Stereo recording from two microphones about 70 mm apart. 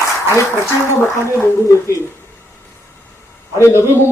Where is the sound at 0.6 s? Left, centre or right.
Left.